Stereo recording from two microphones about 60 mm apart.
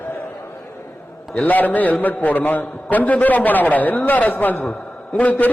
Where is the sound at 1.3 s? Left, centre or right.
Left.